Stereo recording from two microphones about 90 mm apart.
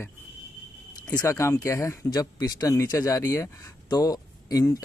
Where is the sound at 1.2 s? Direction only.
30° left (ahead or behind).